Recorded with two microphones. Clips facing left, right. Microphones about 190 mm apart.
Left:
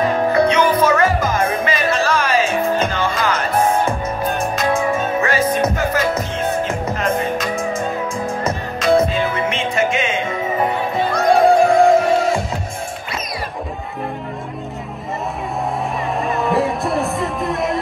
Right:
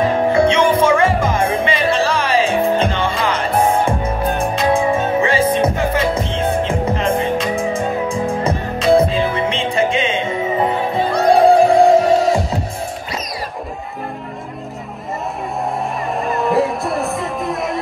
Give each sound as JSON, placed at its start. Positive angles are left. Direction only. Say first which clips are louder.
{"t": 0.0, "sound": "music", "louder": "right 1 dB", "side_deg": -25}
{"t": 16.2, "sound": "music", "louder": "right 2 dB", "side_deg": 0}